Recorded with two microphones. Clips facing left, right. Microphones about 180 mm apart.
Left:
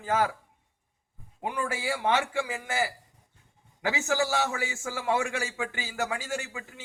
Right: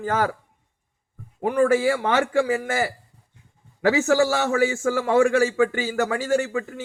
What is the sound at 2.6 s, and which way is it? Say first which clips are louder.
A man's voice: right 5 dB; 45° right (ahead or behind).